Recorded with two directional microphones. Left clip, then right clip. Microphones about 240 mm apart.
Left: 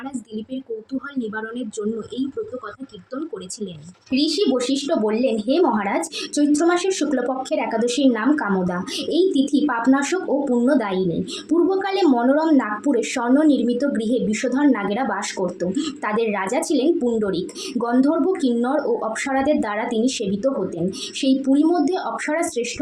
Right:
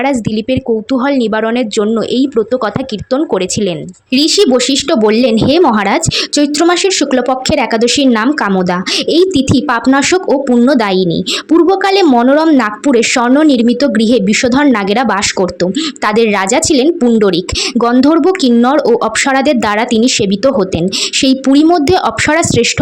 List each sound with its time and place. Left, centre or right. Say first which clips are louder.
1.0 s speech: right 18 dB; right
3.1 s speech: right 17 dB; right